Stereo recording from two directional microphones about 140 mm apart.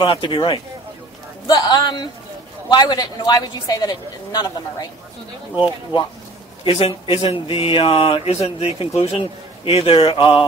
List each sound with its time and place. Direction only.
0.0 s a man's voice: 40° left (ahead or behind)
6.6 s speech: 40° left (ahead or behind)